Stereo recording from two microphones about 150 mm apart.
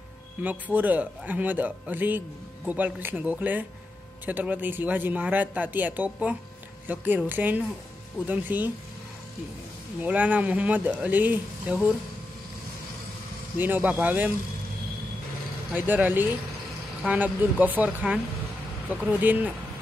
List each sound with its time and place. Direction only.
0.4 s a man's voice: 10° right (ahead or behind)
10.0 s a man's voice: 10° right (ahead or behind)
13.6 s a man's voice: 10° right (ahead or behind)
15.7 s a man's voice: 10° right (ahead or behind)